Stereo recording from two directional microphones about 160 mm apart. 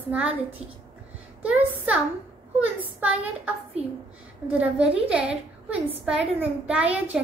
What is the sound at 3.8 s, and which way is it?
Speech, 40° right (ahead or behind).